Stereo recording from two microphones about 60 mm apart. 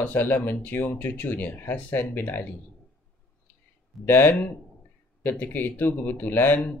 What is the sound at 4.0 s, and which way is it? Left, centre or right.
Speech, left.